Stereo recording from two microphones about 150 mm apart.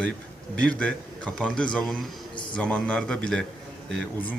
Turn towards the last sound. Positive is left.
turn(degrees=5)  # may be behind; listen again after turning